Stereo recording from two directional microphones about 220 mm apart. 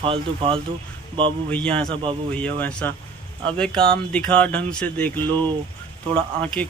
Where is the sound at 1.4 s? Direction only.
5° left (ahead or behind).